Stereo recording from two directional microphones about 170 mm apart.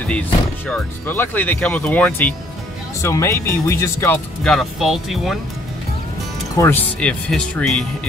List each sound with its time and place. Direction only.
0.7 s speech: 10° left (ahead or behind)
4.4 s speech: centre (ahead or behind)
6.5 s speech: 15° left (ahead or behind)